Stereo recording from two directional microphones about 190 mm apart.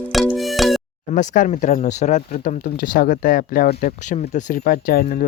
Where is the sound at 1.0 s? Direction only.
40° left (ahead or behind).